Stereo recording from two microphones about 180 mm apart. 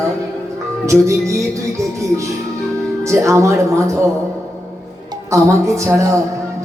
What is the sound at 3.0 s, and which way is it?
Speech, 15° right (ahead or behind).